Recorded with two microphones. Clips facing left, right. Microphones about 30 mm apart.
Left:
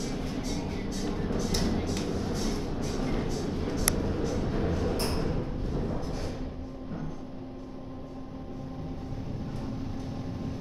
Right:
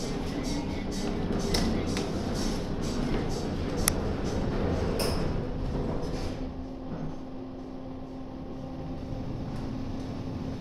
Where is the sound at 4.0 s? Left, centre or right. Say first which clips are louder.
Left 1 dB; centre.